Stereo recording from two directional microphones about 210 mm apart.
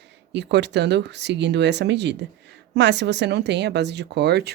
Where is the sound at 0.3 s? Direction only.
55° right (ahead or behind).